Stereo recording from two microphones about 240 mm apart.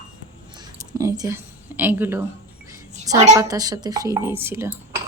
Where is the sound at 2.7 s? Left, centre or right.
Centre.